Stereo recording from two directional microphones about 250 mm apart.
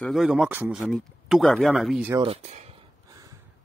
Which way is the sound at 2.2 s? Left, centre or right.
Right.